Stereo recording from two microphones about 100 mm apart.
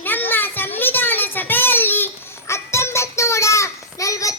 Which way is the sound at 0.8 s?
20° left (ahead or behind).